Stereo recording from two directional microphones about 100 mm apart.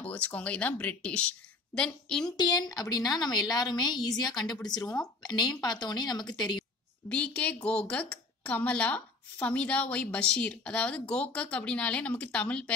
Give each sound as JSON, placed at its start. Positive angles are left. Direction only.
{"t": 0.0, "sound": "speech", "side_deg": 15}
{"t": 2.3, "sound": "a woman's voice", "side_deg": 45}
{"t": 7.1, "sound": "speech", "side_deg": 15}